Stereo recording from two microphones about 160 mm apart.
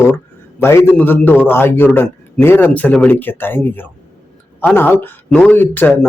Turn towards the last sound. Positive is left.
turn(degrees=10)  # may be behind; listen again after turning